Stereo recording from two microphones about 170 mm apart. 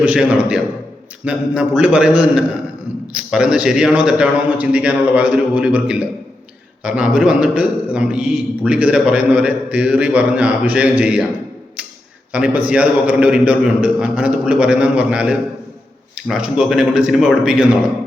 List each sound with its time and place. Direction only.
0.0 s a man's voice: 5° right (ahead or behind)
11.8 s a sound: 5° right (ahead or behind)
12.3 s a man's voice: 5° right (ahead or behind)